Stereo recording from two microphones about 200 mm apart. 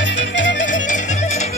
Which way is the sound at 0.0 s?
65° left (ahead or behind).